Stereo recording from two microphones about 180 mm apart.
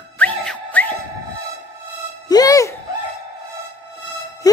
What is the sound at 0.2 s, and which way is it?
Music, 10° left (ahead or behind).